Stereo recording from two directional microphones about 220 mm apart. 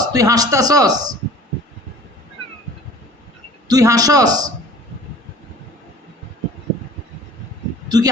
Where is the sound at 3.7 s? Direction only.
15° right (ahead or behind).